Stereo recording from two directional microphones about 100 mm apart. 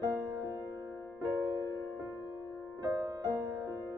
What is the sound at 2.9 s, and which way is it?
Music, 35° right (ahead or behind).